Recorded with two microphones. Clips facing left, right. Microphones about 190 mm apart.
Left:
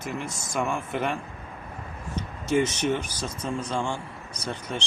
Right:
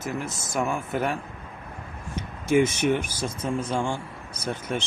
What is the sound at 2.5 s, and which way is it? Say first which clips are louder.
Speech: right 3 dB; 10° right (ahead or behind).